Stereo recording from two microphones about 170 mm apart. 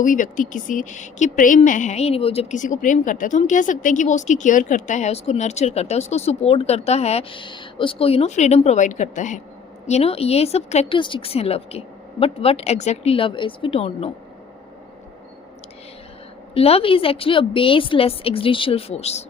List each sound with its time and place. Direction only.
0.0 s a woman's voice: 50° left (ahead or behind)
16.6 s a woman's voice: 35° left (ahead or behind)